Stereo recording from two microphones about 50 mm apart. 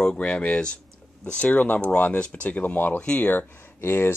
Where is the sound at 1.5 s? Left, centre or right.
Left.